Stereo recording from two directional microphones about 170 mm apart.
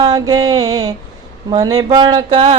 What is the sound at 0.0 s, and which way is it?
Mantra, 20° right (ahead or behind).